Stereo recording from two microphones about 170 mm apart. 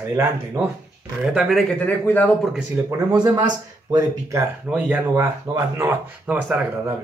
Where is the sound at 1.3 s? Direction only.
Centre (ahead or behind).